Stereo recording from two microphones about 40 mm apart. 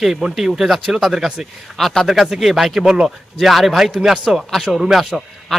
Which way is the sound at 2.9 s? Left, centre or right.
Centre.